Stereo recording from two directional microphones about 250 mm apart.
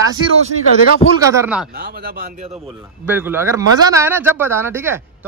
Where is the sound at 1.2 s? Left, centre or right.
Centre.